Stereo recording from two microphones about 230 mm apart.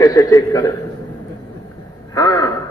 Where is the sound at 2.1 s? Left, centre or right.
Centre.